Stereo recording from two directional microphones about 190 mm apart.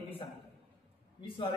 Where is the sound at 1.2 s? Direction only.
30° left (ahead or behind).